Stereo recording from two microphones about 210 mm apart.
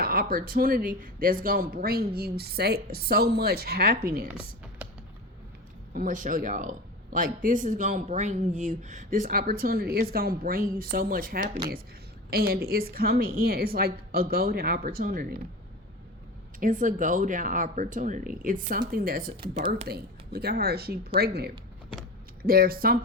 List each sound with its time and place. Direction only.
0.0 s speech: 45° right (ahead or behind)
4.3 s computer keyboard: 10° right (ahead or behind)
5.9 s speech: 40° right (ahead or behind)
16.6 s speech: 40° right (ahead or behind)
19.4 s speech: 30° right (ahead or behind)
19.9 s speech: 50° right (ahead or behind)
22.4 s speech: 45° right (ahead or behind)